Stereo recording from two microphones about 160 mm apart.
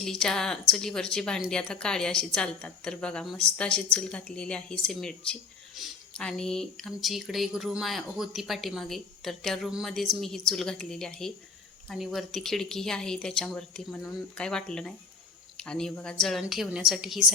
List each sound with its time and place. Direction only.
0.0 s speech: 5° left (ahead or behind)